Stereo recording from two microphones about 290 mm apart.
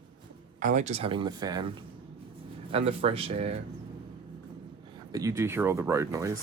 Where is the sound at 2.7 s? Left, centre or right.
Centre.